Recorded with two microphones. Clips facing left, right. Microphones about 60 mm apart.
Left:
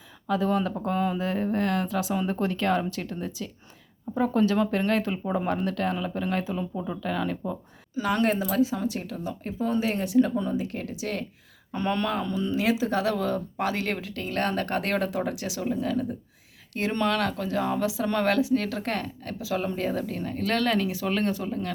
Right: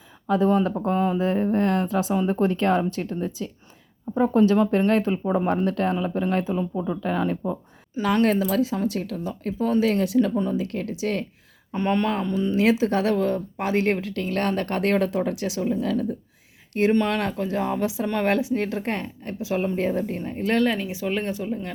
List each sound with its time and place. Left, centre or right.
0.3 s speech: right
4.7 s speech: right
5.1 s speech: centre
5.5 s speech: right
7.0 s speech: right
7.9 s speech: right
11.7 s speech: right
12.5 s speech: right
13.1 s speech: right
16.9 s speech: right